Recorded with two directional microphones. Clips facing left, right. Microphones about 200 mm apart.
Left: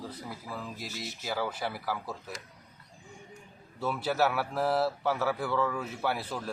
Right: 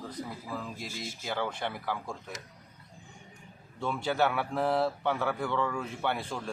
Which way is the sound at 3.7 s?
5° left (ahead or behind).